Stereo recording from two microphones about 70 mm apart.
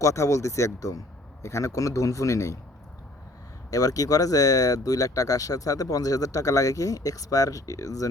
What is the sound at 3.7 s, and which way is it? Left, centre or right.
Speech, left.